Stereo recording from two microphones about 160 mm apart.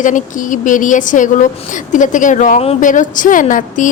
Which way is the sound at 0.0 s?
55° left (ahead or behind).